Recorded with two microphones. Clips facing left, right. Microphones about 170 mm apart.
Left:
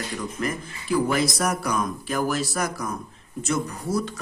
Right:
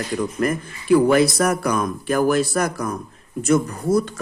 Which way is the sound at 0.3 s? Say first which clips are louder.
Right 7 dB; 55° right (ahead or behind).